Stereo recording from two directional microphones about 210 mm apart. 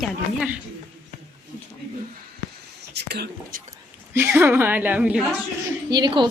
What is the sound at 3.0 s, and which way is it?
Speech, 50° right (ahead or behind).